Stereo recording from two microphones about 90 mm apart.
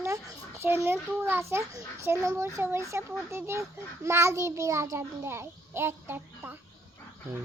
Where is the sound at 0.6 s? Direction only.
25° right (ahead or behind).